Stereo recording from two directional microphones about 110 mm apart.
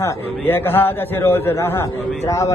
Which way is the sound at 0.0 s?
20° left (ahead or behind).